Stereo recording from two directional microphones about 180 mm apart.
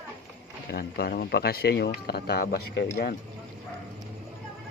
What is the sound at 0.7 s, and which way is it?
Speech, 65° left (ahead or behind).